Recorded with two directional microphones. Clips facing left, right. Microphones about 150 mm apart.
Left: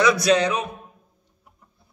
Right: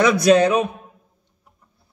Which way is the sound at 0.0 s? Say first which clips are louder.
Right 4 dB; 50° right (ahead or behind).